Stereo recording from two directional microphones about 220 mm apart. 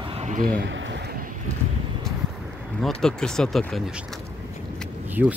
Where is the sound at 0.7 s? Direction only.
55° right (ahead or behind).